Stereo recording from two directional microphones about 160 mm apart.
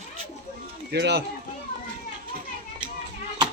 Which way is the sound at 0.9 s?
90° right.